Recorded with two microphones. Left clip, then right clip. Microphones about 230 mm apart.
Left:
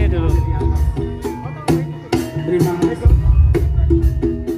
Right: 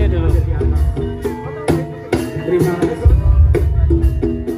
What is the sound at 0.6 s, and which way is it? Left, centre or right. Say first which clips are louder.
Music: right 1 dB; left.